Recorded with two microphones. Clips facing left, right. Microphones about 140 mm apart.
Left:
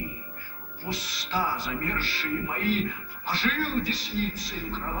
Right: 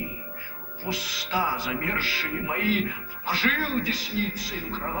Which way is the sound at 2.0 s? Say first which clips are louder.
Right 1 dB; 90° right.